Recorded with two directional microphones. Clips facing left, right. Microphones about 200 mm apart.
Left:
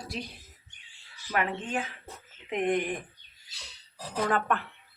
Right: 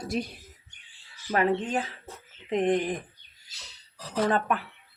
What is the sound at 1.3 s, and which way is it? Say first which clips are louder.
Speech: right 5 dB; 35° right (ahead or behind).